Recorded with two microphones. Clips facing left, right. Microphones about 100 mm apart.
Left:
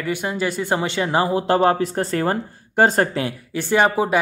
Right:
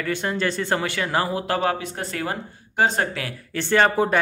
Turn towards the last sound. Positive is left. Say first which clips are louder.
# left 1 dB
turn(degrees=10)  # may be behind; listen again after turning